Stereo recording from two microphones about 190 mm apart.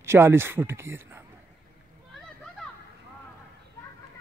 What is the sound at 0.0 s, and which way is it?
Speech, 15° right (ahead or behind).